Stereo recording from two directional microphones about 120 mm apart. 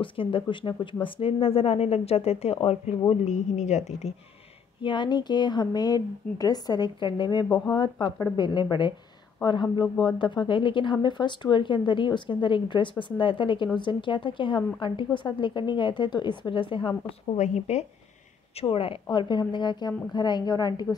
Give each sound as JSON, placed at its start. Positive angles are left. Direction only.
{"t": 0.0, "sound": "a woman's voice", "side_deg": 45}
{"t": 3.3, "sound": "a woman's voice", "side_deg": 80}
{"t": 4.8, "sound": "a woman's voice", "side_deg": 40}
{"t": 17.4, "sound": "a woman's voice", "side_deg": 70}
{"t": 18.6, "sound": "a woman's voice", "side_deg": 50}